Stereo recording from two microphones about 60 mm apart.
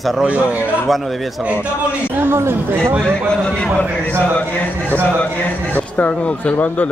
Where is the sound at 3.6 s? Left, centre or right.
Left.